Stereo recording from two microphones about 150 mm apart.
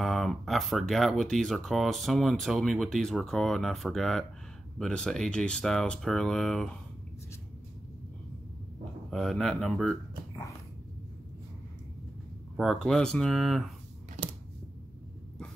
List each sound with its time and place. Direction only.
0.0 s speech: centre (ahead or behind)
9.1 s speech: centre (ahead or behind)
12.5 s speech: centre (ahead or behind)